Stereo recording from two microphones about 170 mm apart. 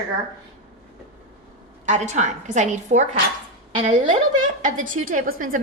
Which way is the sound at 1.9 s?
45° right (ahead or behind).